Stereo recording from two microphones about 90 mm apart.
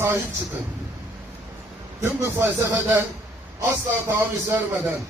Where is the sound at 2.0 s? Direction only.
25° right (ahead or behind).